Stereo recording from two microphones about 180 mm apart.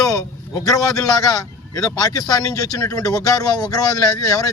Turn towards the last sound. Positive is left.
turn(degrees=20)  # may be behind; listen again after turning